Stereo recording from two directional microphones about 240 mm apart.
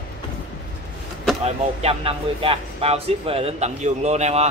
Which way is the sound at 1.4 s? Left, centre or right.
Right.